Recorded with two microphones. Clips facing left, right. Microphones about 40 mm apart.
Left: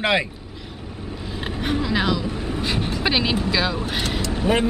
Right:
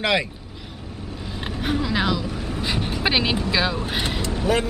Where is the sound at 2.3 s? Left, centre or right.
Centre.